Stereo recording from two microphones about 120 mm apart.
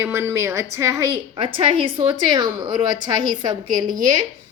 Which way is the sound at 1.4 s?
50° right (ahead or behind).